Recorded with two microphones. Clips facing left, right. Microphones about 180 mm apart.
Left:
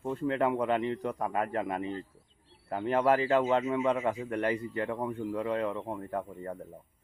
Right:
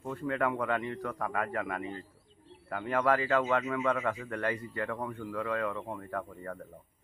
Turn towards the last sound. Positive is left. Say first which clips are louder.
# left 2 dB
turn(degrees=20)  # may be behind; listen again after turning